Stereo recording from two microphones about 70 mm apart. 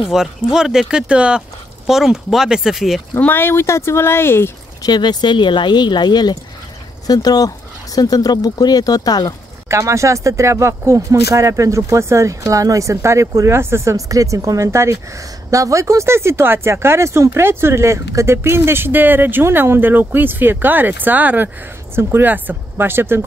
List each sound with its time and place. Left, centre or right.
0.1 s speech: centre
3.2 s speech: left
4.8 s speech: left
7.1 s speech: left
9.7 s speech: right